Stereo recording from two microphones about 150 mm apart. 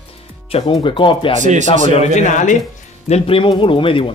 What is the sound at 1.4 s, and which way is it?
Speech, 55° right (ahead or behind).